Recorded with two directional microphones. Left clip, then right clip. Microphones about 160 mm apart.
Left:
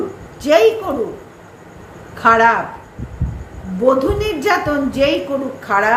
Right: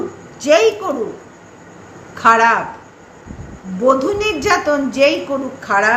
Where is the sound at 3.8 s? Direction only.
15° right (ahead or behind).